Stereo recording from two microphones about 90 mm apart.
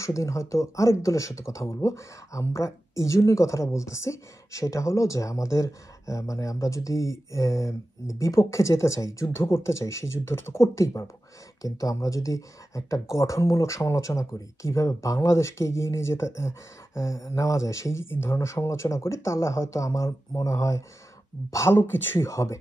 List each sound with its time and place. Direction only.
0.0 s speech: 35° left (ahead or behind)